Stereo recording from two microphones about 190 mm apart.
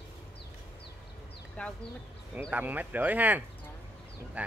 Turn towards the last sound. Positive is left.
turn(degrees=-5)  # may be behind; listen again after turning